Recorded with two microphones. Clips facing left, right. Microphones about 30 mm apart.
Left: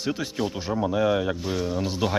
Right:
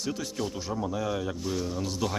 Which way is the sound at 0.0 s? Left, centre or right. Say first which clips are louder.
Left 5 dB; left.